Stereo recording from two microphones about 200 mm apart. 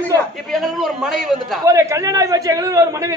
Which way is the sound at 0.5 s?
Centre (ahead or behind).